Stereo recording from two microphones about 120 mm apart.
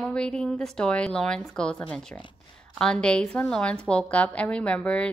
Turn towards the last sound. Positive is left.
turn(degrees=10)  # may be behind; listen again after turning